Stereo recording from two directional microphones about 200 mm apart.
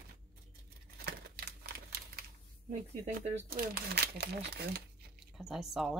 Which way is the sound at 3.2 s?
30° right (ahead or behind).